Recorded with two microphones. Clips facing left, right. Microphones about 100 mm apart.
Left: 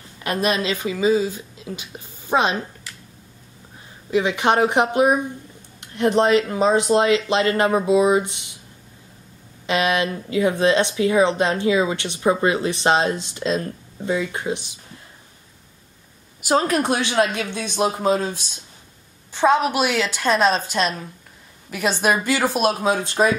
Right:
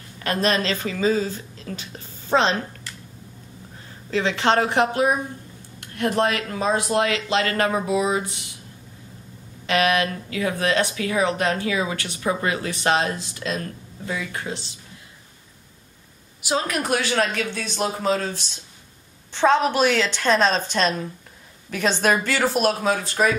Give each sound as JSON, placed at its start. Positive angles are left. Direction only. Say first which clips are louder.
{"t": 0.2, "sound": "a woman's voice", "louder": "even", "side_deg": 15}
{"t": 4.1, "sound": "a woman's voice", "louder": "left 2 dB", "side_deg": 15}
{"t": 9.7, "sound": "speech", "louder": "even", "side_deg": 20}
{"t": 16.3, "sound": "a woman's voice", "louder": "left 5 dB", "side_deg": 45}
{"t": 16.8, "sound": "a woman's voice", "louder": "left 2 dB", "side_deg": 20}